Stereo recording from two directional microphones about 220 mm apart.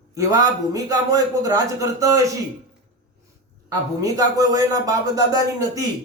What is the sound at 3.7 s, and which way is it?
A man's voice, 15° right (ahead or behind).